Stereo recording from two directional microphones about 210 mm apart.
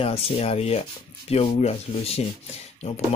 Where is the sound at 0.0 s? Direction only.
30° left (ahead or behind).